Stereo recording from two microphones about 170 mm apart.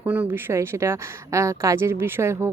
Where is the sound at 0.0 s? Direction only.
10° right (ahead or behind).